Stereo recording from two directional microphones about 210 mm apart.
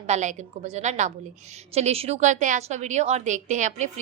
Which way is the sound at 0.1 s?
35° right (ahead or behind).